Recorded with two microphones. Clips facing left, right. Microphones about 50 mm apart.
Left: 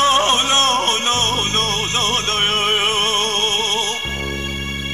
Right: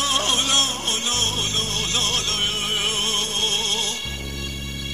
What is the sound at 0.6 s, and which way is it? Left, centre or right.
Music, left.